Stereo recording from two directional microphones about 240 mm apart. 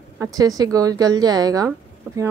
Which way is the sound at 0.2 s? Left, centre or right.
Centre.